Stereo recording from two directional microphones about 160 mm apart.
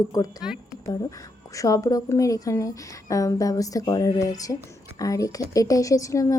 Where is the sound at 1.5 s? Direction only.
20° left (ahead or behind).